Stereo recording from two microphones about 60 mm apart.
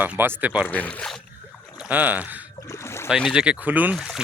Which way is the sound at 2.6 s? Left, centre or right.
Left.